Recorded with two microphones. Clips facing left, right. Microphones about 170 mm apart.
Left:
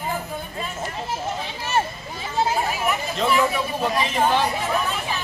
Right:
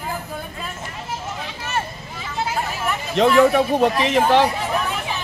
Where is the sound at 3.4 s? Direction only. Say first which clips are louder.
Right 8 dB; 70° right (ahead or behind).